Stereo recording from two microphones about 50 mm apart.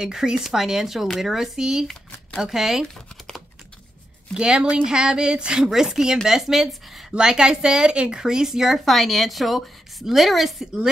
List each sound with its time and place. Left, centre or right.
0.0 s a woman's voice: centre
4.3 s a woman's voice: centre